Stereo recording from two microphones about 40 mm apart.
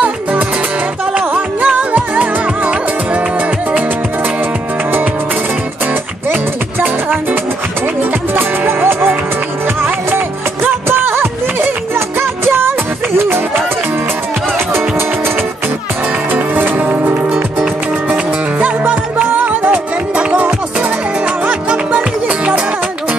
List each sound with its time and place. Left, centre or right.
0.0 s music: right
8.0 s music: right
10.9 s music: right
14.7 s music: right
16.3 s music: right
18.6 s music: right
21.5 s music: right